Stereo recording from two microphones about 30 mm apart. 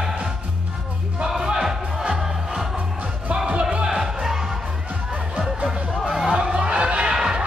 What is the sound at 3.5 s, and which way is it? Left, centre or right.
Music, right.